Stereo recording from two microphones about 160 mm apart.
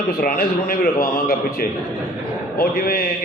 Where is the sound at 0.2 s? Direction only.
65° left (ahead or behind).